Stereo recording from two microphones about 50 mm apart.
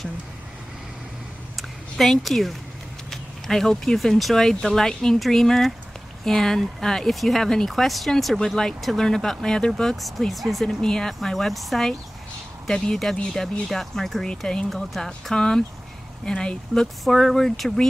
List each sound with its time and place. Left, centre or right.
1.6 s a sound: centre
3.1 s speech: centre
10.8 s speech: centre
16.8 s speech: centre